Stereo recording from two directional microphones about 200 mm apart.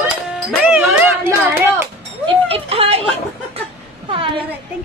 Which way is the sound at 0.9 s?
10° right (ahead or behind).